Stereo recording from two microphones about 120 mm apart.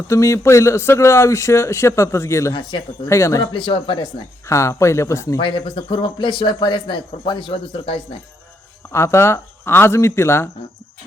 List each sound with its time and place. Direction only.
0.1 s speech: 25° left (ahead or behind)
3.5 s speech: 45° left (ahead or behind)
4.4 s speech: 25° left (ahead or behind)
5.4 s speech: 45° left (ahead or behind)
8.9 s speech: 20° left (ahead or behind)